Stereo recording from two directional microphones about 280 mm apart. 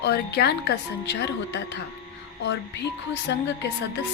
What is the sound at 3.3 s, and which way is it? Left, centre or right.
Speech, left.